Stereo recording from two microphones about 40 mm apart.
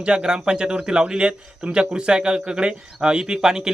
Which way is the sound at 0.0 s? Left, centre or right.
Right.